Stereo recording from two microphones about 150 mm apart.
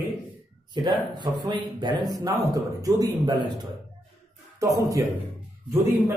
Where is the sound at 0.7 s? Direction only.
30° right (ahead or behind).